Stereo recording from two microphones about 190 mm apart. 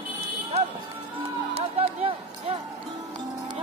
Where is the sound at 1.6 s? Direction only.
30° right (ahead or behind).